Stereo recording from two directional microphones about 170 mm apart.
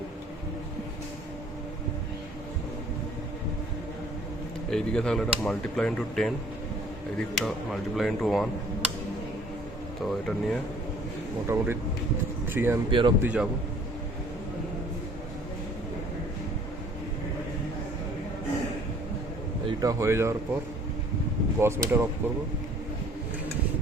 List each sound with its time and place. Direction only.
4.7 s speech: 5° left (ahead or behind)
10.1 s speech: centre (ahead or behind)
11.4 s speech: 15° right (ahead or behind)
12.9 s speech: 30° right (ahead or behind)
13.2 s speech: 5° right (ahead or behind)
19.6 s speech: 20° right (ahead or behind)
21.6 s speech: 15° right (ahead or behind)